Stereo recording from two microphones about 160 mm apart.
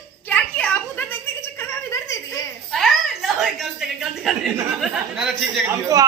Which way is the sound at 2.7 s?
Centre (ahead or behind).